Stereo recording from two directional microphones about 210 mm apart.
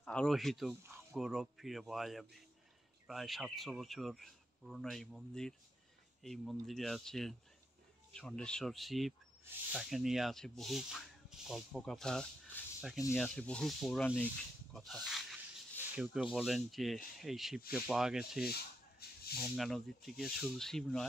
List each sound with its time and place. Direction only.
0.0 s speech: 5° left (ahead or behind)
18.4 s rub: 50° left (ahead or behind)
19.3 s speech: centre (ahead or behind)